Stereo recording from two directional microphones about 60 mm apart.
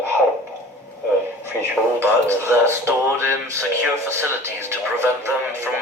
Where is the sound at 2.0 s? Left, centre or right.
Right.